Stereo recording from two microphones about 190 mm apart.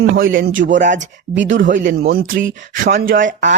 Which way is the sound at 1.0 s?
70° right (ahead or behind).